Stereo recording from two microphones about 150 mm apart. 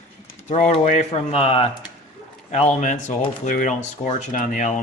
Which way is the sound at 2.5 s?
50° left (ahead or behind).